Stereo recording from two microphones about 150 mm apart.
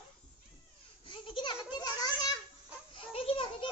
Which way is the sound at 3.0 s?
35° left (ahead or behind).